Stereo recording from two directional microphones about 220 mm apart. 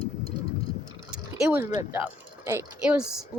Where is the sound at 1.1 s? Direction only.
5° right (ahead or behind).